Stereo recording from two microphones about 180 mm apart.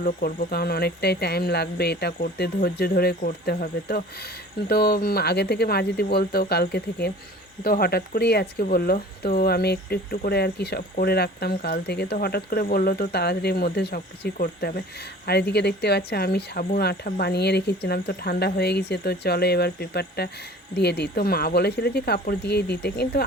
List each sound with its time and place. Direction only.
0.0 s speech: 50° left (ahead or behind); by 23.2 s 65° left (ahead or behind)